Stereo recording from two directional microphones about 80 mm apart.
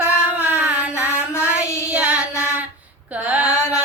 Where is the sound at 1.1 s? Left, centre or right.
Left.